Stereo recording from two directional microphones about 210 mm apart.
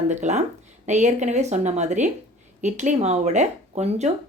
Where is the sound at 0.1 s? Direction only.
35° right (ahead or behind).